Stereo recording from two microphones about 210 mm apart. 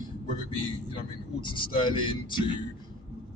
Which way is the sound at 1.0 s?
25° left (ahead or behind).